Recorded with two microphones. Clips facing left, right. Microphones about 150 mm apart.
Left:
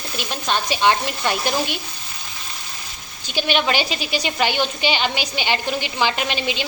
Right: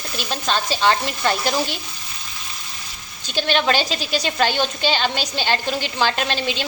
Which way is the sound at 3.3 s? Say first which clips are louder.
Right 1 dB; 10° left (ahead or behind).